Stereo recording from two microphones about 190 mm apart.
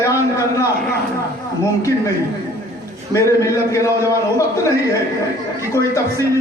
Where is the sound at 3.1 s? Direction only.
15° left (ahead or behind).